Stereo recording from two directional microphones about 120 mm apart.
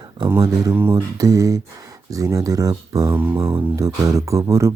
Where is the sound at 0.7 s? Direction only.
15° right (ahead or behind).